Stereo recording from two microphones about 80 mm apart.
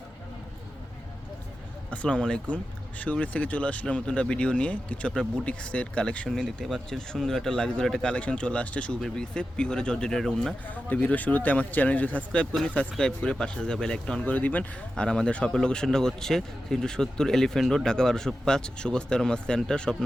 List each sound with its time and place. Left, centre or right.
1.9 s speech: centre
10.7 s speech: centre
14.2 s speech: left